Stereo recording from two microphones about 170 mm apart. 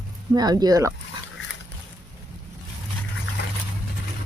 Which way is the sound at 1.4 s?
90° left.